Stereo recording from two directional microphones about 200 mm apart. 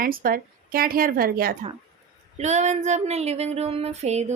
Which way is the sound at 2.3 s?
35° right (ahead or behind).